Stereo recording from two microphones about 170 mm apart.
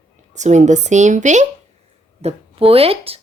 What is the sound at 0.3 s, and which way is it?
A woman's voice, 45° right (ahead or behind).